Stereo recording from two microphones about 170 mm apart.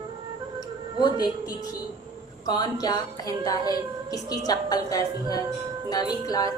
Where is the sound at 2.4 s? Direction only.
25° left (ahead or behind).